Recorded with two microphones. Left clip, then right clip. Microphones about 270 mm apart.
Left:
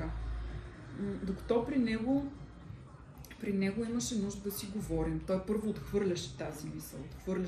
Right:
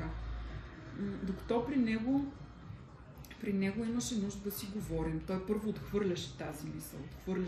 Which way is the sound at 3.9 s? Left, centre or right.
Left.